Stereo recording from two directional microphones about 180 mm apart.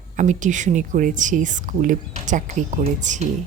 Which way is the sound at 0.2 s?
45° right (ahead or behind).